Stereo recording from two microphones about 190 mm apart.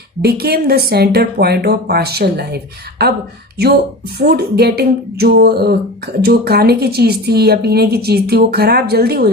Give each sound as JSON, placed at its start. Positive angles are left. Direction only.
{"t": 0.2, "sound": "a woman's voice", "side_deg": -55}
{"t": 4.2, "sound": "a woman's voice", "side_deg": -55}